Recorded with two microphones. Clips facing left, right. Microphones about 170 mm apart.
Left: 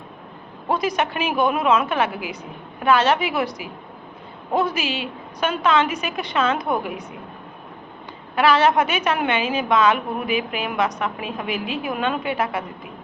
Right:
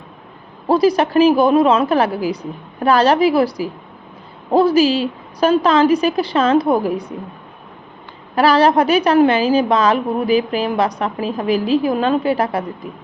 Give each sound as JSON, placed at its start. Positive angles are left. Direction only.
{"t": 0.7, "sound": "a woman's voice", "side_deg": -35}
{"t": 8.4, "sound": "a woman's voice", "side_deg": -35}